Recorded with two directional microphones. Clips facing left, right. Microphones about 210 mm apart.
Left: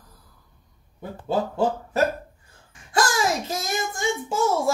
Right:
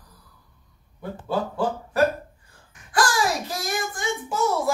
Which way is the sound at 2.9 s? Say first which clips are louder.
Even; 20° left (ahead or behind).